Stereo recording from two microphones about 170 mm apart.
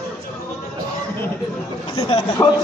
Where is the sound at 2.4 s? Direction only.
10° left (ahead or behind).